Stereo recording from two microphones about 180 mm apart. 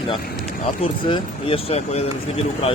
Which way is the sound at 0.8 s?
30° left (ahead or behind).